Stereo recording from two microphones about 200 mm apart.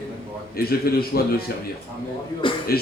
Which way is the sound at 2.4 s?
25° left (ahead or behind).